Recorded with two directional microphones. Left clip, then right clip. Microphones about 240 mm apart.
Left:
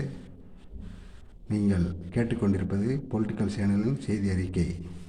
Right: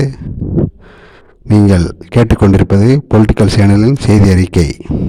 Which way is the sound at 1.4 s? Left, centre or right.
Right.